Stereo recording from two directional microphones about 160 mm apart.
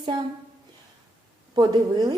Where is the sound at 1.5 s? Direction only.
25° right (ahead or behind).